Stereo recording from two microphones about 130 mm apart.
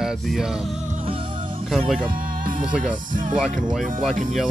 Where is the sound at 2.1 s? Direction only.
90° right.